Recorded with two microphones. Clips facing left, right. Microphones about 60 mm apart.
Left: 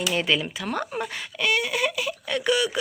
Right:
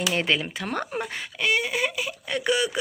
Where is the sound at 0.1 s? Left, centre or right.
Right.